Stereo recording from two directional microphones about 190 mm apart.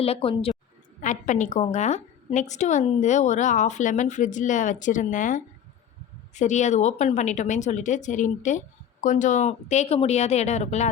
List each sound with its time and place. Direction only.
0.0 s a woman's voice: 30° left (ahead or behind)
1.0 s speech: 40° left (ahead or behind)